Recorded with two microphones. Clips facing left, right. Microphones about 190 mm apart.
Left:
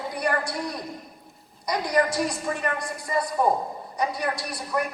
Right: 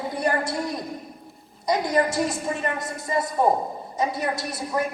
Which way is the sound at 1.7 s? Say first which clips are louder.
Right 2 dB; 25° right (ahead or behind).